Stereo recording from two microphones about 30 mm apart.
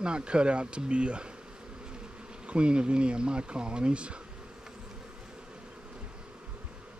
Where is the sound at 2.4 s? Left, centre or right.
Right.